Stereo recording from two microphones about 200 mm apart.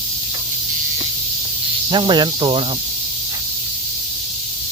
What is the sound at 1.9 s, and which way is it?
Speech, 25° right (ahead or behind).